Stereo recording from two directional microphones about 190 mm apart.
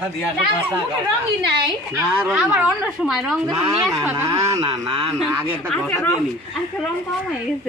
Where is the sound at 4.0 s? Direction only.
15° right (ahead or behind).